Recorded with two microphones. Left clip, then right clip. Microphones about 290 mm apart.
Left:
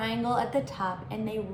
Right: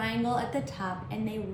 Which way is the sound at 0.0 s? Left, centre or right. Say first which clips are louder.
Left 2 dB; centre.